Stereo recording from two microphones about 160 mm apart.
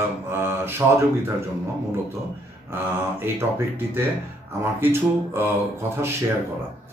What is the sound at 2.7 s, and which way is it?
Speech, 15° right (ahead or behind).